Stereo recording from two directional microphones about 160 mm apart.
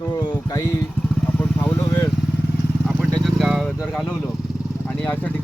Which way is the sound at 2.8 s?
Centre (ahead or behind).